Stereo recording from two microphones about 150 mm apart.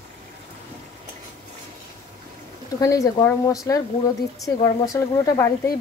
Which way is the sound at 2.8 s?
20° left (ahead or behind).